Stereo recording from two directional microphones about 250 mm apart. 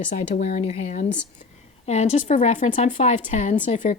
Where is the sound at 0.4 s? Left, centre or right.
Left.